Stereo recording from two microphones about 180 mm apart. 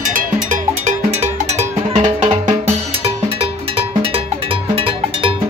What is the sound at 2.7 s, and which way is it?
Music, 35° right (ahead or behind).